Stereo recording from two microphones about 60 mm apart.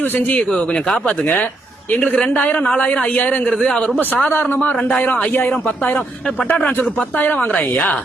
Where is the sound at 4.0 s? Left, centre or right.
Left.